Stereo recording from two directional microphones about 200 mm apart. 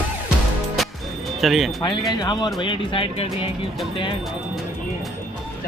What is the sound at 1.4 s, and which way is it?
Speech, centre (ahead or behind).